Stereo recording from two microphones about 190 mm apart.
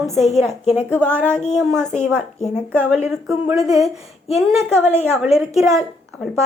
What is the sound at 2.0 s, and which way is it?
Speech, 15° right (ahead or behind).